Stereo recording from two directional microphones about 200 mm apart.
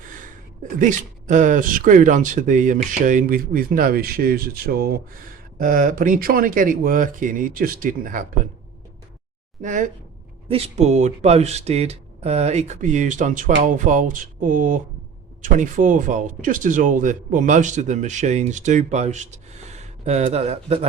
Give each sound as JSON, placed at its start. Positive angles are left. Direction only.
{"t": 0.8, "sound": "speech", "side_deg": -40}
{"t": 9.6, "sound": "speech", "side_deg": -40}